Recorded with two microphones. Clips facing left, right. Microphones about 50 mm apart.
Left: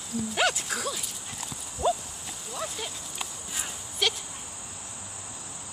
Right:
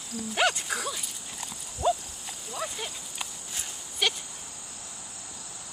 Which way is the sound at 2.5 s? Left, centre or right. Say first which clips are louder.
Even; centre.